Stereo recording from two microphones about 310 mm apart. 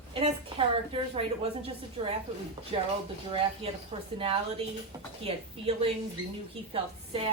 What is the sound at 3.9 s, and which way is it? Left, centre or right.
Speech, right.